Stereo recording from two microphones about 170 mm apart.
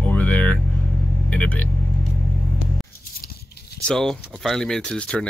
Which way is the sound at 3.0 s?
65° left (ahead or behind).